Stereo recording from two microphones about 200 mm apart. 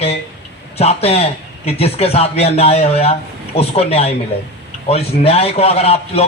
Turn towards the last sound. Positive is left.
turn(degrees=30)  # may be behind; listen again after turning